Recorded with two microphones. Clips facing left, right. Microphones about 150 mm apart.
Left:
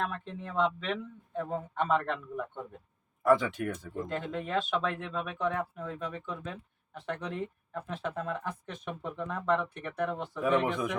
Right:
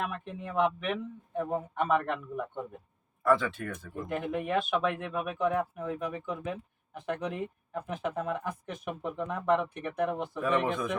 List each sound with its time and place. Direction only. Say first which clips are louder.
0.0 s speech: even; 10° right (ahead or behind)
3.2 s speech: left 1 dB; 15° left (ahead or behind)
4.0 s speech: right 4 dB; 10° right (ahead or behind)